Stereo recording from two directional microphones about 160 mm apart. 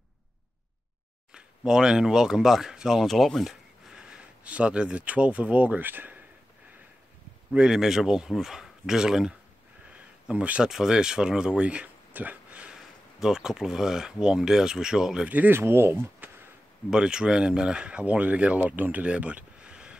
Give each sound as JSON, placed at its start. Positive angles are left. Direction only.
{"t": 1.3, "sound": "speech", "side_deg": -5}
{"t": 7.5, "sound": "speech", "side_deg": -5}